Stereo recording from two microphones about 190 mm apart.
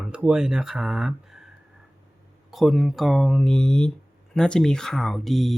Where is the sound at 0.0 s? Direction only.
5° right (ahead or behind).